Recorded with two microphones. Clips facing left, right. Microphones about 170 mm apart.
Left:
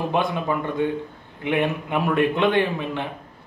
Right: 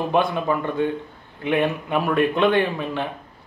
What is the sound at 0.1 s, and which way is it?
Speech, 20° left (ahead or behind).